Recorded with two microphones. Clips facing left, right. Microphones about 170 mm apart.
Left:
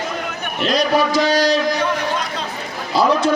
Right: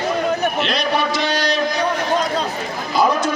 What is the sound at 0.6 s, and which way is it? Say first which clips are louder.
Speech: left 3 dB; 40° left (ahead or behind).